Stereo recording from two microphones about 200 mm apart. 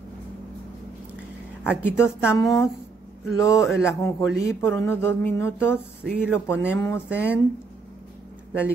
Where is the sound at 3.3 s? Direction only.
15° left (ahead or behind).